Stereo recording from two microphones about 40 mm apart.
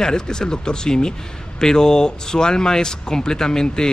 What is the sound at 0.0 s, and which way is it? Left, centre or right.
Speech, centre.